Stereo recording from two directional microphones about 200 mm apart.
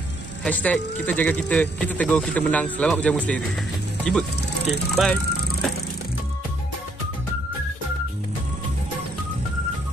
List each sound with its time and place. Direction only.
0.4 s speech: 5° left (ahead or behind)
4.9 s music: 5° left (ahead or behind)